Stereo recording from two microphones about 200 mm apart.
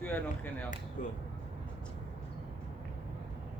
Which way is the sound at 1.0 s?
40° left (ahead or behind).